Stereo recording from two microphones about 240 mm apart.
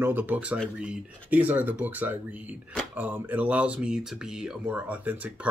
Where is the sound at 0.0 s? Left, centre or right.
Centre.